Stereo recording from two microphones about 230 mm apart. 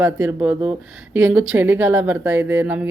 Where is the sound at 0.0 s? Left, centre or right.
Centre.